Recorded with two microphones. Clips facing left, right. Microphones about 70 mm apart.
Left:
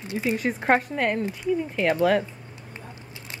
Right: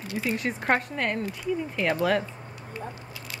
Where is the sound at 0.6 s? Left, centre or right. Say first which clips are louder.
Left 4 dB; centre.